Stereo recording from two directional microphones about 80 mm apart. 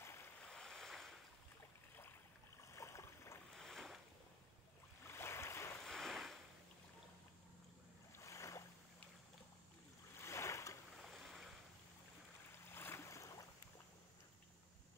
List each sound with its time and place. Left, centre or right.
0.4 s waves: centre
2.6 s boat: left
3.5 s boat: centre
5.0 s boat: left
5.9 s a sound: centre
8.2 s boat: left
10.2 s boat: left
10.9 s boat: centre
12.7 s boat: left